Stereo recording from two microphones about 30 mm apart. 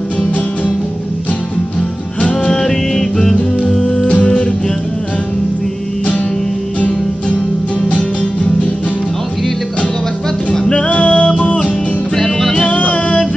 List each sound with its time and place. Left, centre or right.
2.5 s music: centre
10.7 s music: left